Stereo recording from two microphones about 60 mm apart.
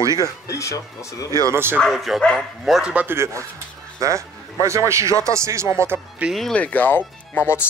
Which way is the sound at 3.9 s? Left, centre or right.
Right.